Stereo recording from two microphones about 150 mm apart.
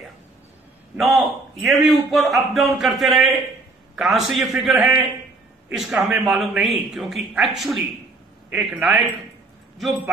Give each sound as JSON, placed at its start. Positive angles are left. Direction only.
{"t": 0.9, "sound": "a man's voice", "side_deg": 0}